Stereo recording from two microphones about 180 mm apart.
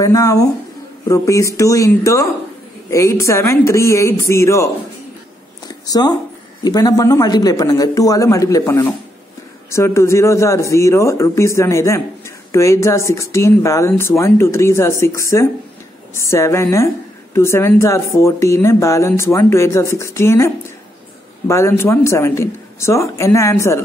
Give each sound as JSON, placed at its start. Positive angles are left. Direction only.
{"t": 0.0, "sound": "a man's voice", "side_deg": 20}
{"t": 5.9, "sound": "a man's voice", "side_deg": 20}